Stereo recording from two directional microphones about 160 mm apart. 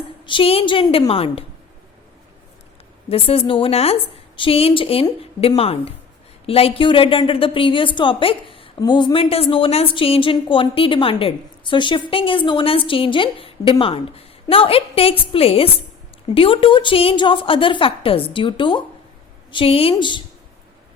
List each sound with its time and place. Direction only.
0.3 s a woman's voice: 35° left (ahead or behind)
3.1 s a woman's voice: 35° left (ahead or behind)